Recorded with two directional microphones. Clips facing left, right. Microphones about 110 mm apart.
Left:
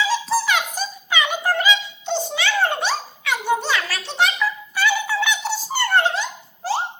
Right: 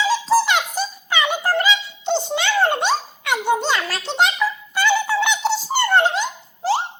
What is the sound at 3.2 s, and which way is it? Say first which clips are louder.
Children playing: right 2 dB; 20° right (ahead or behind).